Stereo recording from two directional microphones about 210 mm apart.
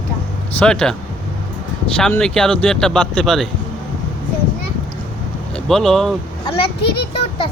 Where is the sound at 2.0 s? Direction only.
5° left (ahead or behind).